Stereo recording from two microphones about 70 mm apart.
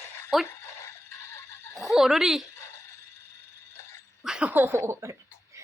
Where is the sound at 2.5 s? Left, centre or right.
Left.